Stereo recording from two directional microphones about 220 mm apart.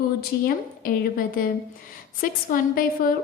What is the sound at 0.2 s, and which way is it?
A woman's voice, 45° left (ahead or behind).